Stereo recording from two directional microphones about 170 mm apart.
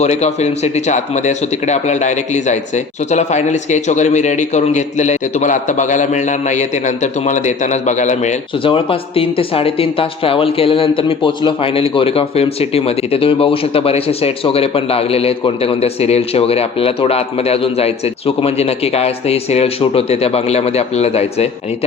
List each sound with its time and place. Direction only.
0.0 s speech: 40° left (ahead or behind)
8.6 s speech: 30° left (ahead or behind)